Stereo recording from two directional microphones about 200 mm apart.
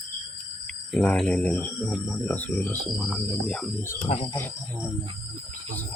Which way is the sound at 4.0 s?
30° left (ahead or behind).